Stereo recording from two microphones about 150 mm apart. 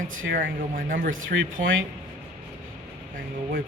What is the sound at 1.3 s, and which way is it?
Speech, 90° right.